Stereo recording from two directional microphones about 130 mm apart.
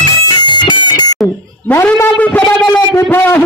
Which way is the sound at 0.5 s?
35° left (ahead or behind).